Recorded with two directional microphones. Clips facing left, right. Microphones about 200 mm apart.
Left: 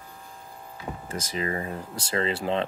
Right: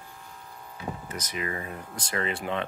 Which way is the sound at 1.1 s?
30° left (ahead or behind).